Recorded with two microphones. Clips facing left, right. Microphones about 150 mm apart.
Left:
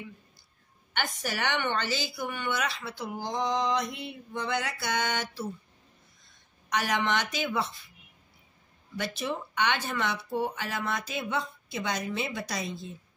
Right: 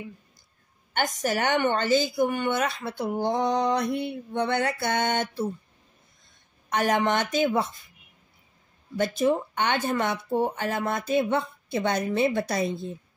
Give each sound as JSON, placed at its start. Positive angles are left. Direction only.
{"t": 0.9, "sound": "speech", "side_deg": -45}
{"t": 3.3, "sound": "mantra", "side_deg": -60}
{"t": 4.4, "sound": "speech", "side_deg": -60}
{"t": 6.7, "sound": "speech", "side_deg": -50}
{"t": 8.9, "sound": "speech", "side_deg": -45}